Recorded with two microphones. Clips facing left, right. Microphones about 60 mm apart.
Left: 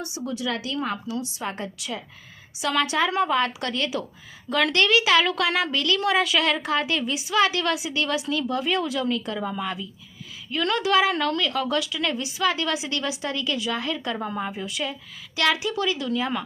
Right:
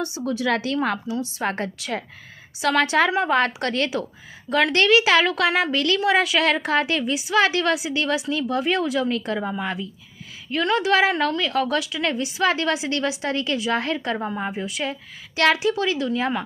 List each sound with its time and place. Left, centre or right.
0.0 s a woman's voice: right
0.4 s speech: right
1.0 s a woman's voice: right
1.4 s a woman's voice: right
2.6 s a woman's voice: right
9.4 s a woman's voice: right
11.8 s a woman's voice: right
14.2 s a woman's voice: centre